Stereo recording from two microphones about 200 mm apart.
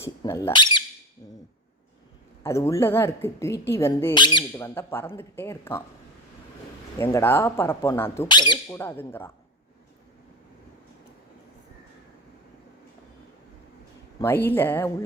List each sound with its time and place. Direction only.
0.0 s speech: 15° left (ahead or behind)
2.4 s speech: 15° left (ahead or behind)
7.0 s speech: 10° left (ahead or behind)
8.8 s speech: 10° left (ahead or behind)
14.2 s speech: 10° left (ahead or behind)